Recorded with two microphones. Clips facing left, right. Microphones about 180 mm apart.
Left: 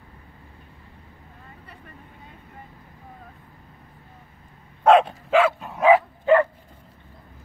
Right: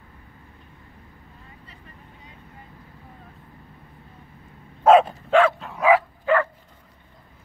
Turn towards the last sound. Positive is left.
turn(degrees=20)  # may be behind; listen again after turning